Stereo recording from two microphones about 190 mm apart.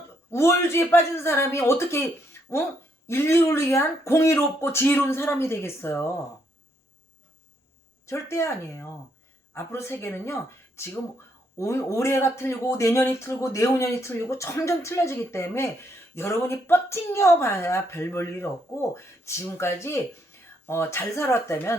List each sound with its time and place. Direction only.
0.3 s speech: 15° left (ahead or behind)
3.1 s speech: 15° left (ahead or behind)
8.0 s speech: 15° left (ahead or behind)